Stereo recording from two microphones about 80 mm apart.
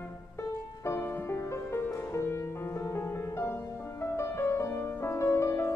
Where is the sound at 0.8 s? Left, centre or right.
Left.